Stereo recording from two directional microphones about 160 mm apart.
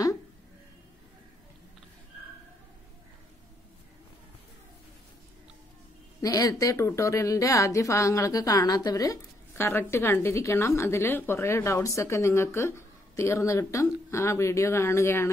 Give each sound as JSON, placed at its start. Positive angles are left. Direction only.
{"t": 6.2, "sound": "a woman's voice", "side_deg": 20}